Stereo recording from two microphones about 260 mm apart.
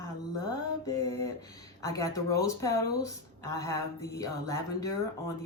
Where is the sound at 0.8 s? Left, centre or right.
Centre.